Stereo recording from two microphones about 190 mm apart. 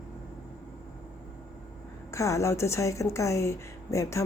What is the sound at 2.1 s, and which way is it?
A woman's voice, 15° left (ahead or behind).